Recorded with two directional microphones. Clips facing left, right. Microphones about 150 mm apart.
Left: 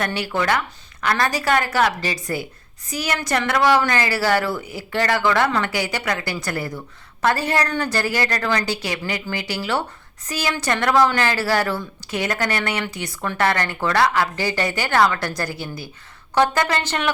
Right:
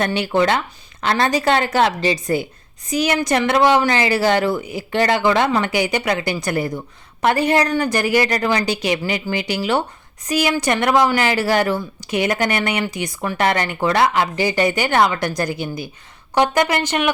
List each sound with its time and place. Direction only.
0.0 s a woman's voice: 20° right (ahead or behind)